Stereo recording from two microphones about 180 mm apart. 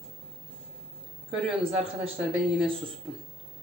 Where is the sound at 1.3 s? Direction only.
30° right (ahead or behind).